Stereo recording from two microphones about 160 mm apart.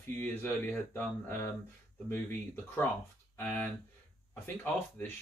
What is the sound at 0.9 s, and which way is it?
Speech, 15° left (ahead or behind).